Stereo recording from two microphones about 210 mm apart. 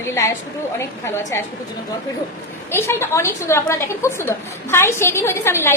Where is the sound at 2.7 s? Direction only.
10° left (ahead or behind).